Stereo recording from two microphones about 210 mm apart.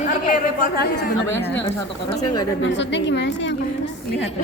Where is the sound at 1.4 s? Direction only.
10° left (ahead or behind).